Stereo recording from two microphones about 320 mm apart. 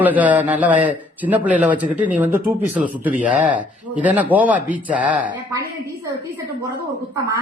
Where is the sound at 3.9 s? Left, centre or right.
Centre.